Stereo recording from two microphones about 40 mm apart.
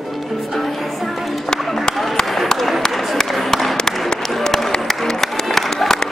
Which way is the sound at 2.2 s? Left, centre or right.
Centre.